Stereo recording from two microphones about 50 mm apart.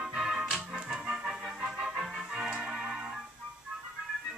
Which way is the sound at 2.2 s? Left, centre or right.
Centre.